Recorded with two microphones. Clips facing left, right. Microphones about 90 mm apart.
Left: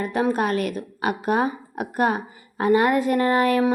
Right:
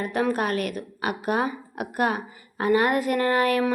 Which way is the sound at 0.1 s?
30° left (ahead or behind).